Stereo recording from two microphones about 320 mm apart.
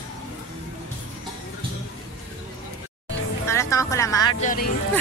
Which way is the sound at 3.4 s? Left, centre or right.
Centre.